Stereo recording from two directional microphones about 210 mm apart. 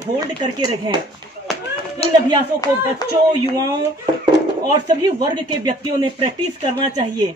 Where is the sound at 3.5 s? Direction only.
15° right (ahead or behind).